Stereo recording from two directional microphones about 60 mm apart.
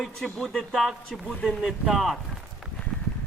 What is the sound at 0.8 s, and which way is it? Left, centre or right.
Speech, centre.